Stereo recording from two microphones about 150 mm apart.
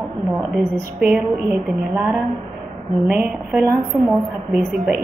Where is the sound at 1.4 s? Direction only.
15° right (ahead or behind).